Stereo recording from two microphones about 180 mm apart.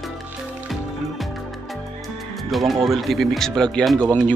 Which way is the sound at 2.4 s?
Centre (ahead or behind).